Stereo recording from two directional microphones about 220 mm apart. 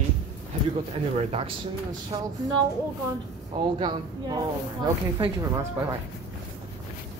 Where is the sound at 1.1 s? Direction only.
25° right (ahead or behind).